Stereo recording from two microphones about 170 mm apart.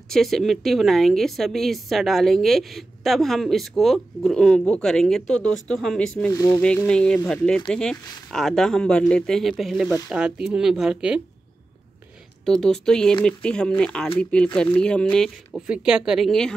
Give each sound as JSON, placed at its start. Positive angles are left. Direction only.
{"t": 0.1, "sound": "a woman's voice", "side_deg": 0}
{"t": 6.3, "sound": "speech", "side_deg": 20}
{"t": 6.9, "sound": "a woman's voice", "side_deg": 5}
{"t": 12.4, "sound": "a woman's voice", "side_deg": 5}